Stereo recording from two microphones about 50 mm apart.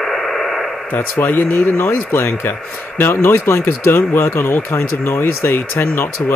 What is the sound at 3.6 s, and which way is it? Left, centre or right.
Speech, left.